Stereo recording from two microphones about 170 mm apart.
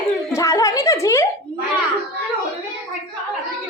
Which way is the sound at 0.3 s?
20° left (ahead or behind).